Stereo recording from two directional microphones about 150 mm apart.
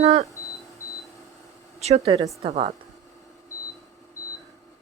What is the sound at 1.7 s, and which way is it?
Speech, 45° right (ahead or behind).